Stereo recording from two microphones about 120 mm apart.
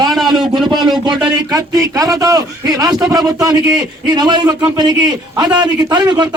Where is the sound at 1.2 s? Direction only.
35° right (ahead or behind).